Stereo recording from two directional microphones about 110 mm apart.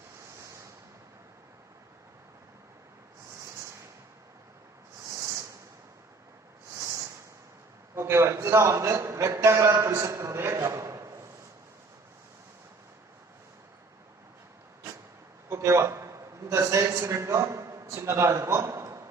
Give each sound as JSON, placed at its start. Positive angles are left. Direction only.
{"t": 6.7, "sound": "a sound", "side_deg": -30}
{"t": 7.9, "sound": "a man's voice", "side_deg": -25}
{"t": 15.4, "sound": "a man's voice", "side_deg": -25}